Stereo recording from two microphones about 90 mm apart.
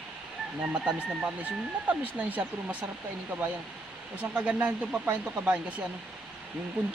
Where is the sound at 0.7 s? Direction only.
10° right (ahead or behind).